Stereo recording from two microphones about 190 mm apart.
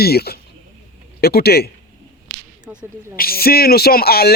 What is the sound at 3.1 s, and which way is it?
Speech, 55° left (ahead or behind).